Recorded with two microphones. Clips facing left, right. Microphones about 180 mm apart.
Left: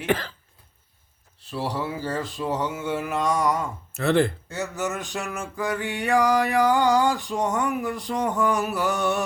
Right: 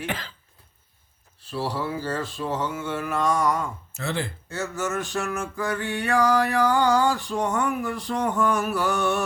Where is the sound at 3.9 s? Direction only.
60° left (ahead or behind).